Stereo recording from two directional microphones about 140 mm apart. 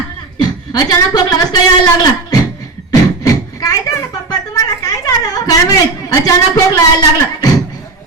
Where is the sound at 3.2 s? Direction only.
25° left (ahead or behind).